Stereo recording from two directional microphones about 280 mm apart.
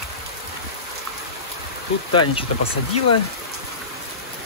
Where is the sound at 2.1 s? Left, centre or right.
Centre.